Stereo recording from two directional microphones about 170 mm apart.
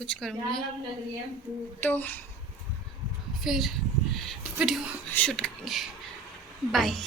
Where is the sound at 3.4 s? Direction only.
Centre (ahead or behind).